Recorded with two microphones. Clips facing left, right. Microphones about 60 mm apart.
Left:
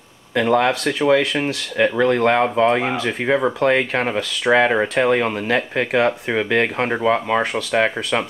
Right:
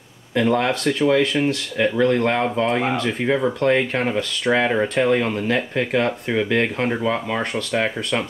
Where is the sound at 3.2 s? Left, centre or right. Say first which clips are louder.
Left 2 dB; centre.